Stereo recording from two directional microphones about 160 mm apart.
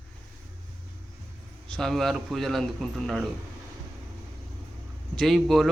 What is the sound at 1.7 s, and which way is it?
Speech, 5° left (ahead or behind).